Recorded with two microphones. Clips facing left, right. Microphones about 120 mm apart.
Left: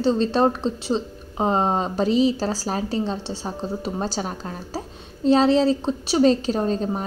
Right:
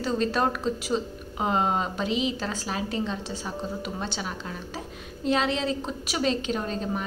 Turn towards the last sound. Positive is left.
turn(degrees=35)  # may be behind; listen again after turning